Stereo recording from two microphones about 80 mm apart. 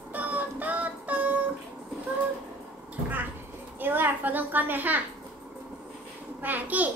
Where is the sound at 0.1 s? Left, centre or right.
Right.